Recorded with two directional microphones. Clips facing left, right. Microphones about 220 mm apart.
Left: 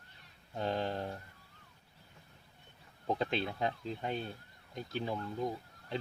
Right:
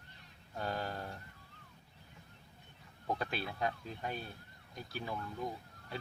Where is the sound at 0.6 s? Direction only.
25° left (ahead or behind).